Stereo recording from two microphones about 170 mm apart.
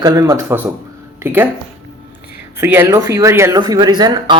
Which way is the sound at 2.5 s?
15° right (ahead or behind).